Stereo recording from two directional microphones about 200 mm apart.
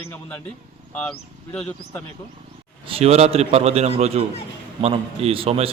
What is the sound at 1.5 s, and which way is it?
Speech, 5° left (ahead or behind).